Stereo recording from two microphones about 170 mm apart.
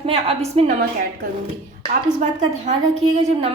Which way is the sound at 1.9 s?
40° right (ahead or behind).